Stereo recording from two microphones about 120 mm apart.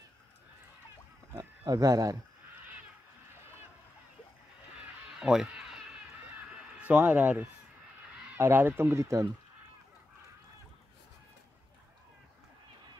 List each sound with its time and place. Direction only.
1.3 s speech: 25° right (ahead or behind)
5.2 s a sound: 5° right (ahead or behind)
6.3 s fowl: 10° right (ahead or behind)
8.4 s speech: 20° right (ahead or behind)